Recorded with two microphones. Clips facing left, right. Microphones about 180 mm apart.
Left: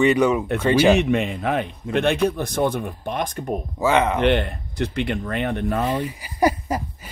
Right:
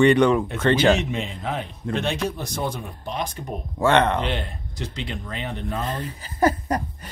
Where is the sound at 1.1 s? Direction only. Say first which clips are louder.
Left 7 dB; 60° left (ahead or behind).